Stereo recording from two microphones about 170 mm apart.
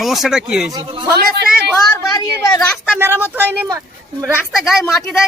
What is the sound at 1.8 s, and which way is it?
Speech, 20° left (ahead or behind).